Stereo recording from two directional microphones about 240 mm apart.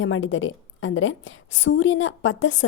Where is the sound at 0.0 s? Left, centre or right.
Left.